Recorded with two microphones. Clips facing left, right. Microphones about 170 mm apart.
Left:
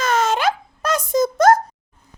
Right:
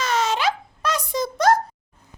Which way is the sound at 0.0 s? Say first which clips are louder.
Left 3 dB; 50° left (ahead or behind).